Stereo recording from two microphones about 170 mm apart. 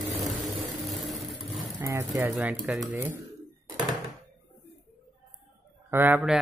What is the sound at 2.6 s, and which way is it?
Speech, 5° right (ahead or behind).